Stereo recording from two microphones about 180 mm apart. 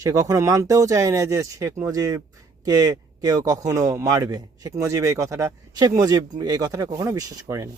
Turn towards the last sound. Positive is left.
turn(degrees=-15)  # may be behind; listen again after turning